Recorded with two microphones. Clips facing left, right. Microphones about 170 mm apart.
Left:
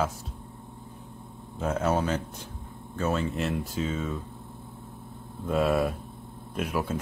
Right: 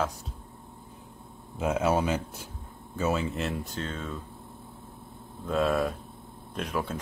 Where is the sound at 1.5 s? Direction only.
10° right (ahead or behind); by 4.2 s 5° left (ahead or behind).